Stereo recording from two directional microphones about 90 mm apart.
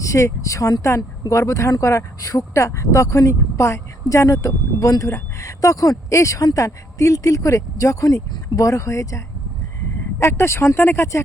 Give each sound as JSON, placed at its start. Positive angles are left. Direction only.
{"t": 0.0, "sound": "speech", "side_deg": 35}